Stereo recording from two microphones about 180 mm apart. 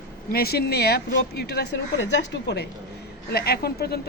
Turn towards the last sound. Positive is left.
turn(degrees=60)  # may be behind; listen again after turning